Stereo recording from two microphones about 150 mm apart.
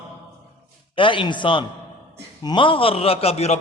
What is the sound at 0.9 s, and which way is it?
A man's voice, 35° left (ahead or behind).